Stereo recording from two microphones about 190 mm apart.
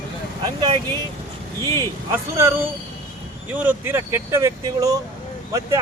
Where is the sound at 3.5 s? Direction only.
10° right (ahead or behind).